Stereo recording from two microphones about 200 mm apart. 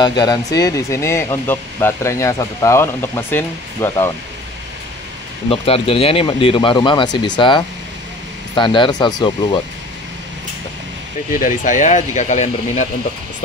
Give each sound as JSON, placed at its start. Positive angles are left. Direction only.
{"t": 0.0, "sound": "speech", "side_deg": 20}
{"t": 5.5, "sound": "speech", "side_deg": 30}
{"t": 11.3, "sound": "speech", "side_deg": 40}